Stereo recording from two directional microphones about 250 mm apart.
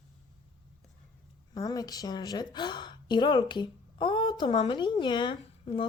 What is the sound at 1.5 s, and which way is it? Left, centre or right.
A woman's voice, centre.